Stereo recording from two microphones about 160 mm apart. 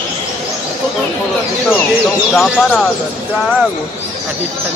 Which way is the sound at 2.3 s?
5° left (ahead or behind).